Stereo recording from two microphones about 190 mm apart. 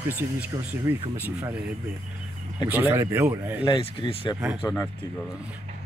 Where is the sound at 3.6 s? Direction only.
30° left (ahead or behind).